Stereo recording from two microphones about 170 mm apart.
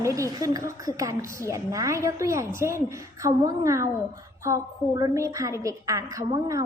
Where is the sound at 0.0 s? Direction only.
20° right (ahead or behind).